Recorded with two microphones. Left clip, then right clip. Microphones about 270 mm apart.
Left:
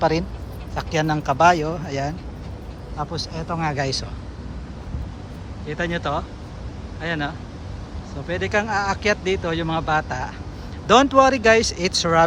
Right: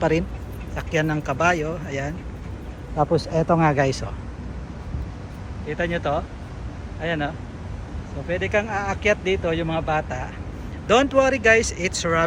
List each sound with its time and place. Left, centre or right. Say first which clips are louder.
0.0 s speech: left 1 dB; centre
3.0 s speech: right 8 dB; centre
5.6 s speech: right 1 dB; centre